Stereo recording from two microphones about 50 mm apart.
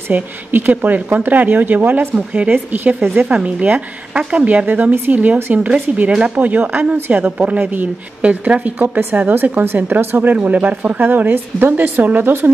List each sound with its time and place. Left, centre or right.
0.1 s speech: right
3.3 s a woman's voice: right
6.3 s a woman's voice: right
9.3 s speech: right